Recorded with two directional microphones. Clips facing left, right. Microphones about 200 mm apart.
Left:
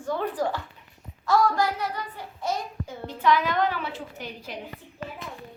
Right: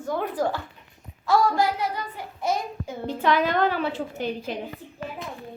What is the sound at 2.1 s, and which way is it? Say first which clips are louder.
Speech: right 3 dB; 10° right (ahead or behind).